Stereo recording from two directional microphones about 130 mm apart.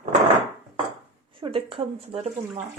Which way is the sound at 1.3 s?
40° right (ahead or behind).